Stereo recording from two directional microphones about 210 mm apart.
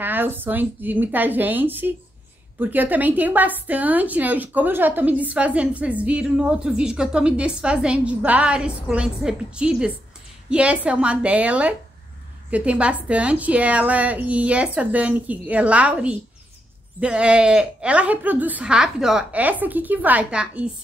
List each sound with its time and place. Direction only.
0.0 s a woman's voice: 10° right (ahead or behind)